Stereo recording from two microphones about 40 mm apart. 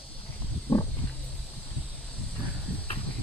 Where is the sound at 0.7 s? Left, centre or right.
Left.